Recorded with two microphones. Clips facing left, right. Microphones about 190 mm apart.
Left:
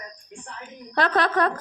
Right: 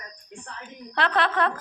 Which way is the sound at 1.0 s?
40° left (ahead or behind).